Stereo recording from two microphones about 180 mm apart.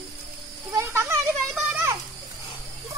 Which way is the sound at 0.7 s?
15° right (ahead or behind).